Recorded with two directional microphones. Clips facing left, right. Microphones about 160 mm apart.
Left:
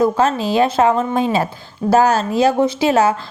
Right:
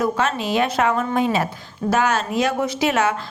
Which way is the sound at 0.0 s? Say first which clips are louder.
Left 6 dB; 35° left (ahead or behind).